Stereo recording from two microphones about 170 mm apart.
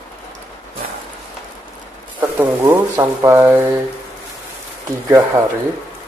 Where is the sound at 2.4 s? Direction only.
15° right (ahead or behind).